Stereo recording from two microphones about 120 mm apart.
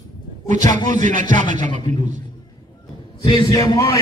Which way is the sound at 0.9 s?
90° right.